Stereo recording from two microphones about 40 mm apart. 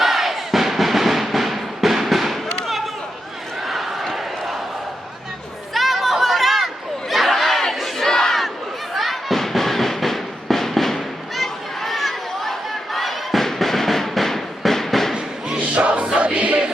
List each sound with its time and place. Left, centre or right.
0.0 s music: centre
2.6 s a sound: centre
5.7 s chatter: centre
7.1 s crowd: centre
8.0 s battle cry: centre
9.0 s music: centre
15.5 s music: right